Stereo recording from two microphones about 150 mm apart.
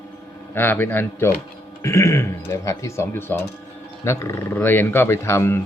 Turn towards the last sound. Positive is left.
turn(degrees=15)  # may be behind; listen again after turning